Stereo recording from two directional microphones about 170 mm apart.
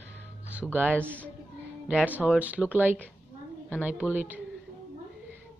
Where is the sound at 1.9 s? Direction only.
10° right (ahead or behind).